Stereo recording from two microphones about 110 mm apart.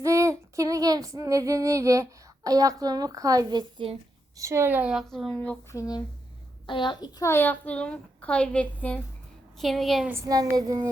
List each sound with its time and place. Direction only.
0.0 s female singing: 25° right (ahead or behind)
4.4 s a woman's voice: 25° right (ahead or behind); by 5.0 s 10° right (ahead or behind)
5.0 s a woman's voice: 5° left (ahead or behind)
5.7 s speech: 30° left (ahead or behind)
6.7 s a child's voice: 45° left (ahead or behind)
7.2 s a woman's voice: 20° left (ahead or behind)
9.6 s a woman's voice: centre (ahead or behind)
10.2 s child singing: 35° right (ahead or behind)